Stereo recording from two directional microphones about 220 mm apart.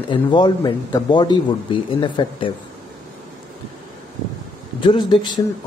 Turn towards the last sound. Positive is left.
turn(degrees=20)  # may be behind; listen again after turning